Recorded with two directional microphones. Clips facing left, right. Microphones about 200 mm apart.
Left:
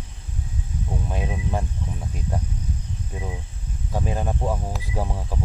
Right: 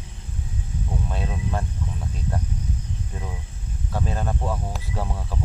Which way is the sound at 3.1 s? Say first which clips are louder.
Left 2 dB; 15° left (ahead or behind).